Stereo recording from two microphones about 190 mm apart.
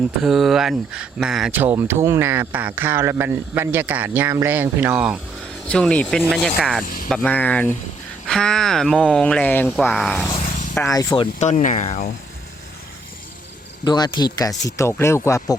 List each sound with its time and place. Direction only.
0.2 s speech: centre (ahead or behind)
5.6 s speech: 5° left (ahead or behind)
6.8 s speech: 45° left (ahead or behind)
7.1 s speech: 5° left (ahead or behind)
10.9 s speech: 20° left (ahead or behind)
11.3 s speech: 40° left (ahead or behind)
13.8 s speech: 20° left (ahead or behind)